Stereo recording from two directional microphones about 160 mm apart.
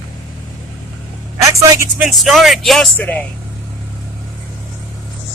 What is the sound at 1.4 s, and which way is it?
Speech, 20° right (ahead or behind).